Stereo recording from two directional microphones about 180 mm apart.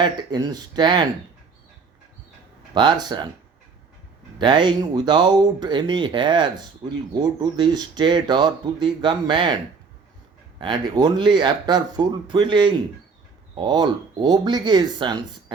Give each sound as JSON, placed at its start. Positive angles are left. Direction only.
{"t": 0.0, "sound": "speech", "side_deg": -25}
{"t": 2.7, "sound": "speech", "side_deg": -25}
{"t": 4.4, "sound": "speech", "side_deg": -25}
{"t": 10.6, "sound": "speech", "side_deg": -25}